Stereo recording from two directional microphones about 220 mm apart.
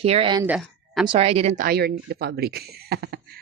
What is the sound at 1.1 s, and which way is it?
Speech, 25° right (ahead or behind).